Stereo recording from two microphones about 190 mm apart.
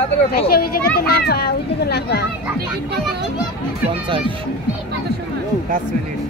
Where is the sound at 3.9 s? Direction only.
25° right (ahead or behind).